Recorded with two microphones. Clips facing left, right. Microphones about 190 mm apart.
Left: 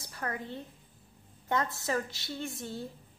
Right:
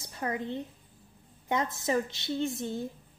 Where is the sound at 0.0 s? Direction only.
20° right (ahead or behind).